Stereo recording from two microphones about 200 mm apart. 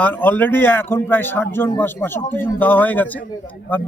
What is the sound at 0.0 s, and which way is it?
A man's voice, 10° left (ahead or behind).